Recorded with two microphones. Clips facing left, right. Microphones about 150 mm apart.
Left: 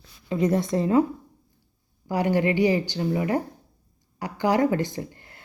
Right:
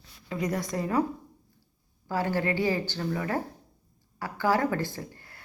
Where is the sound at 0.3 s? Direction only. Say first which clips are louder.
Left 7 dB; 25° left (ahead or behind).